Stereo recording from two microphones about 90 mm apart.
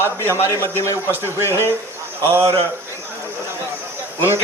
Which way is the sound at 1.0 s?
25° right (ahead or behind).